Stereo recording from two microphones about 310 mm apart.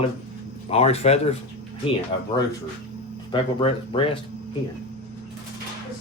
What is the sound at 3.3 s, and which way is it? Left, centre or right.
Speech, centre.